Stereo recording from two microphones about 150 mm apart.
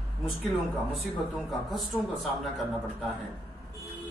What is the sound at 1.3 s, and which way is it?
Speech, centre (ahead or behind).